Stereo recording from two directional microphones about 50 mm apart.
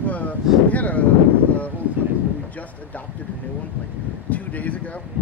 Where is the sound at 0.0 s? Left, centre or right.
Left.